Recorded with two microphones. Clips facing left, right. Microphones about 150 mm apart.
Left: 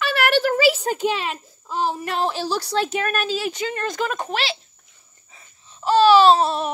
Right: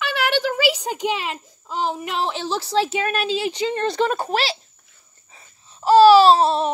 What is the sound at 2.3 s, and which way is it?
Speech, 25° right (ahead or behind).